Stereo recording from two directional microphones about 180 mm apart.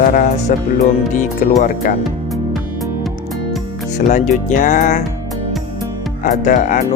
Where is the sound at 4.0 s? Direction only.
40° left (ahead or behind).